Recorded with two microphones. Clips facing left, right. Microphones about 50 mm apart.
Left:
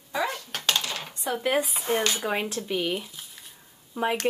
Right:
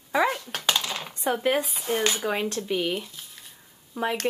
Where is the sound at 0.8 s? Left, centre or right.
Centre.